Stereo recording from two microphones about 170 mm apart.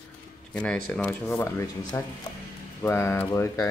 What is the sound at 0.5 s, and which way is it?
Speech, 5° left (ahead or behind).